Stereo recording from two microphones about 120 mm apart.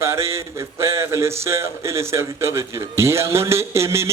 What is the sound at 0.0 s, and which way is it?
Speech, 20° right (ahead or behind).